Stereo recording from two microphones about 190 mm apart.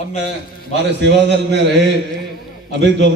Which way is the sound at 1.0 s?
65° right (ahead or behind).